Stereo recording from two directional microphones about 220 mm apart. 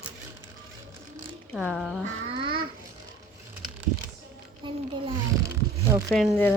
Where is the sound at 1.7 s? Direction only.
Centre (ahead or behind).